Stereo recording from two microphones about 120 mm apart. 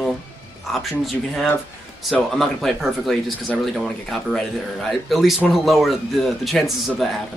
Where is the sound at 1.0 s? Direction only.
Centre (ahead or behind).